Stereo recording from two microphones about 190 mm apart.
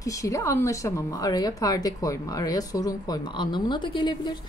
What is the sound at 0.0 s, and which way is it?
A woman's voice, 15° left (ahead or behind).